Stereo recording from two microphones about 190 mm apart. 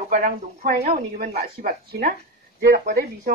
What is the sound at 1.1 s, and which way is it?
A woman's voice, 50° right (ahead or behind).